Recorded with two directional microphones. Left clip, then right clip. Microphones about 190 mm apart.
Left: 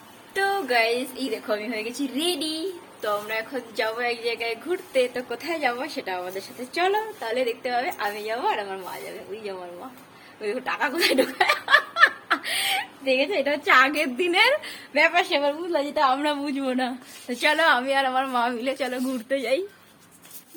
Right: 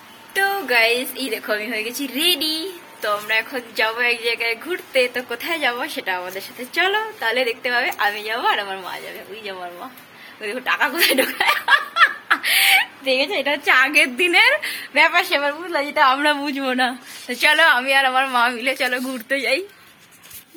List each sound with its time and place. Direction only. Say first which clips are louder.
0.3 s a woman's voice: right 4 dB; 5° left (ahead or behind)
10.4 s a woman's voice: right 5 dB; centre (ahead or behind)